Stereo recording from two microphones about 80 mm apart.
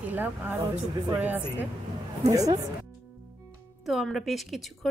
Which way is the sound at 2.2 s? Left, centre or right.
Right.